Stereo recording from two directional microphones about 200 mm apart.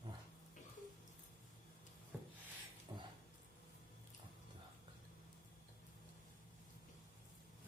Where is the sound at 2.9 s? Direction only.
10° right (ahead or behind).